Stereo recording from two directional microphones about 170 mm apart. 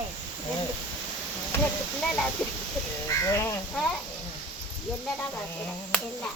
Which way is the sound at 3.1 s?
15° left (ahead or behind).